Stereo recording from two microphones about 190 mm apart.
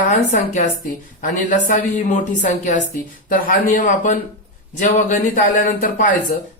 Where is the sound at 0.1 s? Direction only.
40° left (ahead or behind).